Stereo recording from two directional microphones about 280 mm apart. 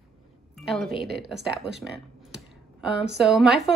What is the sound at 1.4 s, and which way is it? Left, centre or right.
Speech, right.